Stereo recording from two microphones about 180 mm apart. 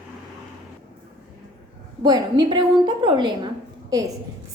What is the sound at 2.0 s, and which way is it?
A woman's voice, 25° right (ahead or behind).